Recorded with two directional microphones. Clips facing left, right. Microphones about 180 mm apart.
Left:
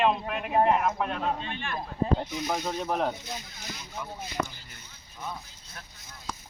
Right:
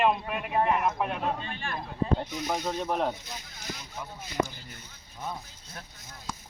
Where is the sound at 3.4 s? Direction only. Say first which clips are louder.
Right 1 dB; 50° right (ahead or behind).